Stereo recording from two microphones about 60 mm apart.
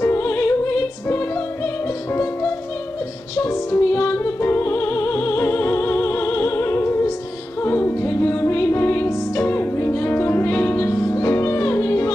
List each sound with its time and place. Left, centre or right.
0.0 s music: left
3.3 s music: left
11.0 s music: left